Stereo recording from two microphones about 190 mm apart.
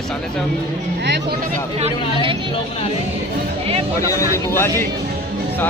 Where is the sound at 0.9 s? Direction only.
60° right (ahead or behind).